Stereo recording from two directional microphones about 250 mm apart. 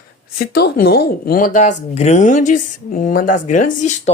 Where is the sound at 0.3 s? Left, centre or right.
Left.